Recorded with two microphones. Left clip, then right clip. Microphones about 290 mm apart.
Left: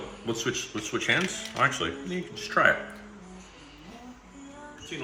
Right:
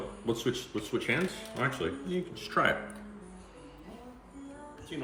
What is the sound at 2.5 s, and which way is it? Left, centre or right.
Speech, centre.